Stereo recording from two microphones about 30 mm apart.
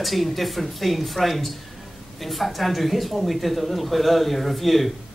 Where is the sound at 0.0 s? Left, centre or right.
Centre.